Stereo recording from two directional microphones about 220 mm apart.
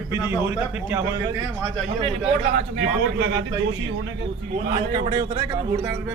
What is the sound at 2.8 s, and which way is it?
Speech, 50° right (ahead or behind).